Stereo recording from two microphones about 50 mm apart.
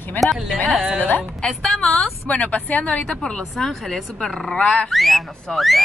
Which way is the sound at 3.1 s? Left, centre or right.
Centre.